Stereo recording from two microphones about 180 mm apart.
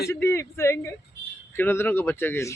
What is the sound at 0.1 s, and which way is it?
Speech, 15° left (ahead or behind).